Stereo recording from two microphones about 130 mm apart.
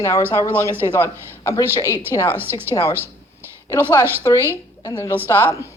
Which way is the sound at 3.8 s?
20° right (ahead or behind).